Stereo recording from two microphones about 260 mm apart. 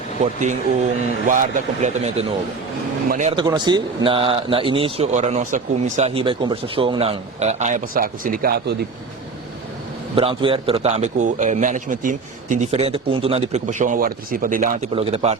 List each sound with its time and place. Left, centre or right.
0.2 s speech: right
3.3 s speech: centre; by 8.7 s right
10.2 s speech: right